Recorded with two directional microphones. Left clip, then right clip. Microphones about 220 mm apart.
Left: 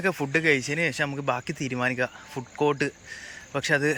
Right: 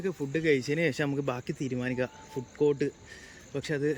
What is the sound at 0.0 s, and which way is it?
Speech, 40° left (ahead or behind).